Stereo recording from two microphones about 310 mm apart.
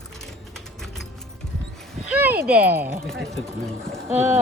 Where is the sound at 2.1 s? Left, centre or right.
Centre.